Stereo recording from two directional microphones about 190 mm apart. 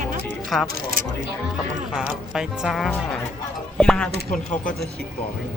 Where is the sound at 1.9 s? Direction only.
5° right (ahead or behind).